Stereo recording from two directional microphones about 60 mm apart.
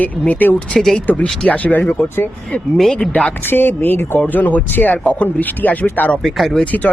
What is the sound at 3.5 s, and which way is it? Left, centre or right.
Speech, left.